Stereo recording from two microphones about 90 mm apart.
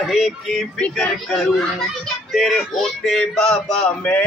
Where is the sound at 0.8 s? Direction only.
15° left (ahead or behind).